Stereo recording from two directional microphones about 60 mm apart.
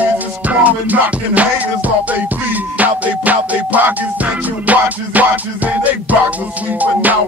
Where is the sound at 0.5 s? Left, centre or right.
Right.